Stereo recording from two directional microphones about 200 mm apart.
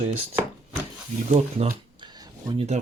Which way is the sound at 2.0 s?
20° right (ahead or behind).